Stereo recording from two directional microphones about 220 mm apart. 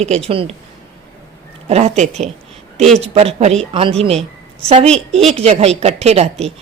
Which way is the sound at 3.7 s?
25° right (ahead or behind).